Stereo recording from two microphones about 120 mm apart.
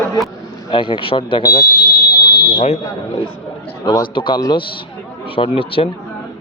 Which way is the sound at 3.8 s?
35° left (ahead or behind).